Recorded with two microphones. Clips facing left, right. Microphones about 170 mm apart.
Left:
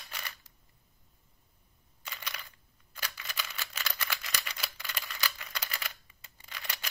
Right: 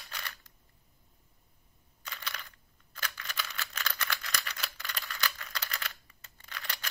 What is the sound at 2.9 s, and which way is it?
Typewriter, 10° left (ahead or behind).